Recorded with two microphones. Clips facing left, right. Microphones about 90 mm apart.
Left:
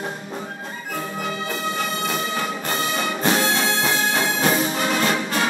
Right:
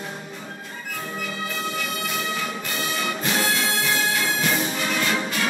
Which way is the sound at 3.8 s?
40° left (ahead or behind).